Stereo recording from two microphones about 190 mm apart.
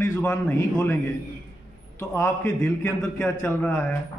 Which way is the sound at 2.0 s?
15° left (ahead or behind).